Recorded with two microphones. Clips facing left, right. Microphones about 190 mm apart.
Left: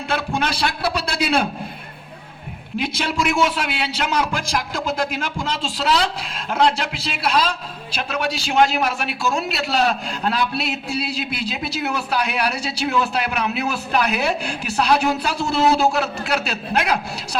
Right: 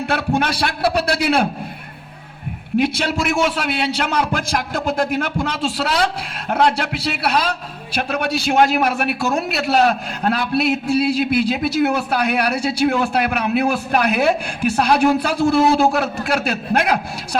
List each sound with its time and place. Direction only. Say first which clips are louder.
0.1 s a man's voice: right 2 dB; 55° right (ahead or behind)
2.7 s a man's voice: right 5 dB; 55° right (ahead or behind)